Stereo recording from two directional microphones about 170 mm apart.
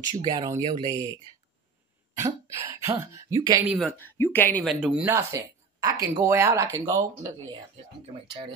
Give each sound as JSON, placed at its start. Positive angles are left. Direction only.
{"t": 0.2, "sound": "speech", "side_deg": -25}
{"t": 3.6, "sound": "speech", "side_deg": 0}
{"t": 4.0, "sound": "speech", "side_deg": 10}
{"t": 4.7, "sound": "speech", "side_deg": -5}